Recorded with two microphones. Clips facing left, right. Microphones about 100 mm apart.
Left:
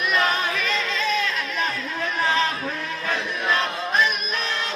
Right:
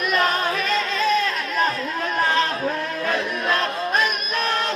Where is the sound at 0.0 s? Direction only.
45° right (ahead or behind).